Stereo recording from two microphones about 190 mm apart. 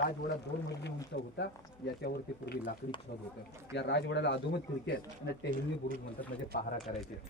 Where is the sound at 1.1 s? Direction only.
60° left (ahead or behind).